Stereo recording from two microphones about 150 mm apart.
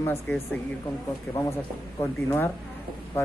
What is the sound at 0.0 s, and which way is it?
Speech, 15° left (ahead or behind).